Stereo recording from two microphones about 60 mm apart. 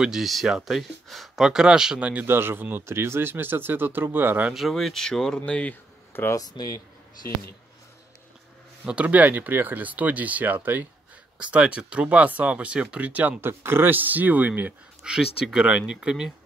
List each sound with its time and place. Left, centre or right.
0.0 s speech: centre
1.4 s speech: centre
2.2 s speech: right
4.6 s speech: centre
5.4 s speech: left
6.3 s speech: left
8.8 s speech: right
11.3 s speech: right
13.4 s speech: right
15.0 s speech: centre